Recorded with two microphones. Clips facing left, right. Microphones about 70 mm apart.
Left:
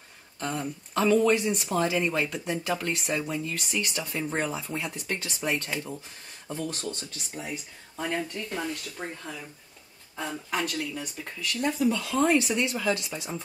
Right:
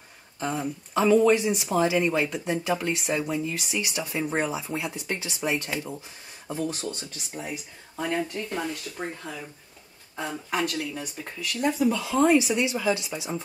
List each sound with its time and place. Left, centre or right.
0.4 s speech: centre